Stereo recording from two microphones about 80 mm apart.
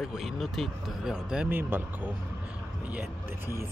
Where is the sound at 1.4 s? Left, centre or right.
Right.